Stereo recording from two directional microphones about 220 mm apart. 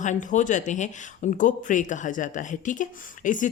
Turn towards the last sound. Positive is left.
turn(degrees=35)  # may be behind; listen again after turning